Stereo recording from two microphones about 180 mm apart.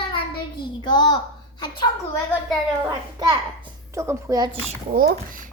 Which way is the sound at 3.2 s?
25° right (ahead or behind).